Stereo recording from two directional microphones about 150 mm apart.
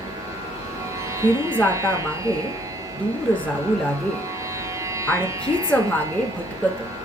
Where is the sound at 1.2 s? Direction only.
20° right (ahead or behind).